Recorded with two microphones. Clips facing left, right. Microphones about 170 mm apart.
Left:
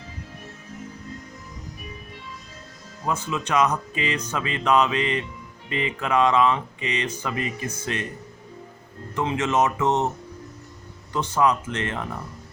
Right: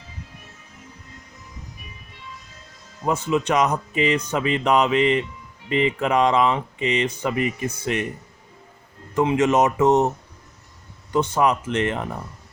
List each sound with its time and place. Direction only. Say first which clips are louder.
3.1 s speech: right 5 dB; 20° right (ahead or behind)
9.1 s speech: right 5 dB; 15° right (ahead or behind)
11.3 s speech: left 1 dB; 20° right (ahead or behind)